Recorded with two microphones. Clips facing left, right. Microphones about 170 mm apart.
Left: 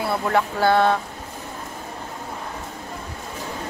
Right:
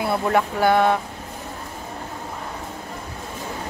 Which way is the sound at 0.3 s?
20° right (ahead or behind).